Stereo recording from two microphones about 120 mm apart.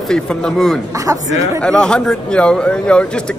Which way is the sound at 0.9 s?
30° right (ahead or behind).